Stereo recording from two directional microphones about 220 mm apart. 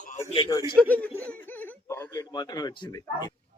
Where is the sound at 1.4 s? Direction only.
10° left (ahead or behind).